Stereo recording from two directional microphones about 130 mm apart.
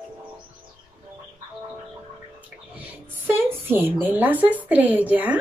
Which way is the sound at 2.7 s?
15° right (ahead or behind).